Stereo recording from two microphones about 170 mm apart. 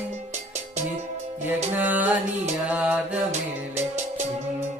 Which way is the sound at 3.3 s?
45° right (ahead or behind).